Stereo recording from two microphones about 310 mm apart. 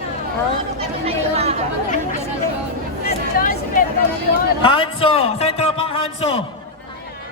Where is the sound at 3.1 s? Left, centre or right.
Left.